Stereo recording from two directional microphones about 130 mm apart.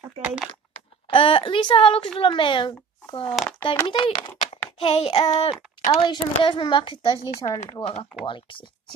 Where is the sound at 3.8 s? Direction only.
35° left (ahead or behind).